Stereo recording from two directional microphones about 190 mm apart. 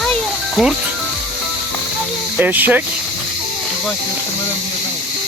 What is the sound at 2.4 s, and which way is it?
Speech, 10° right (ahead or behind).